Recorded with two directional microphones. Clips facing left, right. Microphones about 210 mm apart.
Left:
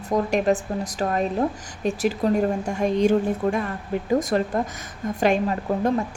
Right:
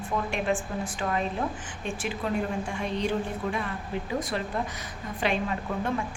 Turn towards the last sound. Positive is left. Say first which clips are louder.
# left 7 dB
turn(degrees=40)  # may be behind; listen again after turning